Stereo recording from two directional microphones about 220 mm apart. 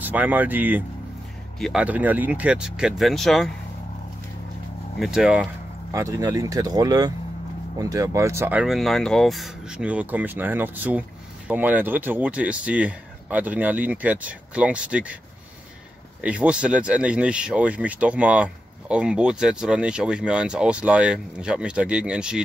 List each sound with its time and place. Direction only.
0.0 s speech: 5° right (ahead or behind)
4.9 s speech: centre (ahead or behind)
16.2 s speech: 5° right (ahead or behind)